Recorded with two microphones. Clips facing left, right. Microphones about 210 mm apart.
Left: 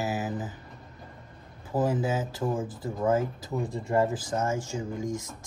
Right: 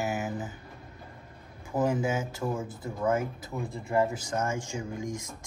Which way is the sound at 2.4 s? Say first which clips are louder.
Left 3 dB; 15° left (ahead or behind).